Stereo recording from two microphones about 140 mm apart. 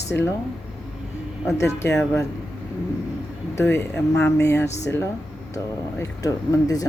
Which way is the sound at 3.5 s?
20° left (ahead or behind).